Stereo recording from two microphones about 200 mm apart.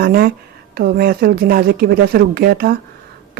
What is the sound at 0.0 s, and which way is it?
Speech, 50° right (ahead or behind).